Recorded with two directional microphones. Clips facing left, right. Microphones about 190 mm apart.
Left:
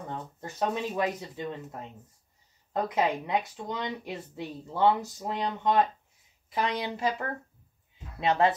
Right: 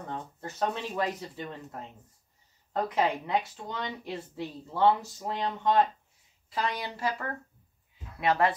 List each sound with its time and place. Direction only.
0.4 s speech: 15° left (ahead or behind)
2.7 s a woman's voice: 15° left (ahead or behind)